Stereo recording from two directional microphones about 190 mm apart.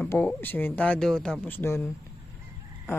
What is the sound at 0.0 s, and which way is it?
Speech, 5° left (ahead or behind).